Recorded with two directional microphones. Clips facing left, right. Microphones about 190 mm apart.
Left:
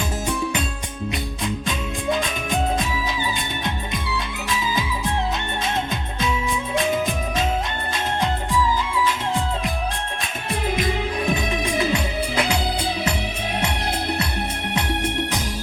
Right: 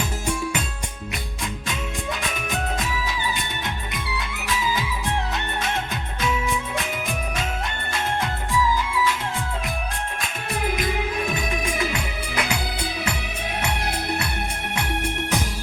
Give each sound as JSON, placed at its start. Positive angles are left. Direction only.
{"t": 10.8, "sound": "music", "side_deg": 25}